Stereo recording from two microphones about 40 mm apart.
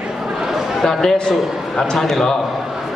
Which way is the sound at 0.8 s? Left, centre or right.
Centre.